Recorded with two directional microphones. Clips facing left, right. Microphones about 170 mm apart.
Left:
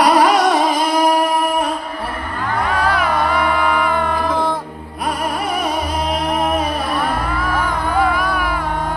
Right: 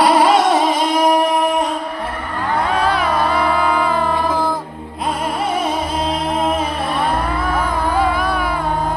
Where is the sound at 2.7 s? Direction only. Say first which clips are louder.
Left 1 dB; 25° right (ahead or behind).